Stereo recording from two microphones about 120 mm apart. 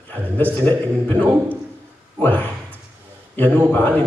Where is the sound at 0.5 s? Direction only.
15° left (ahead or behind).